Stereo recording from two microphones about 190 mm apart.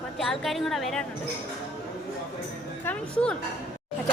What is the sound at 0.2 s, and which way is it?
Speech, centre (ahead or behind).